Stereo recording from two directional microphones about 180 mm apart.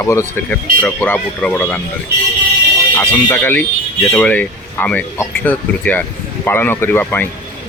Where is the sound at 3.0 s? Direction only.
10° left (ahead or behind).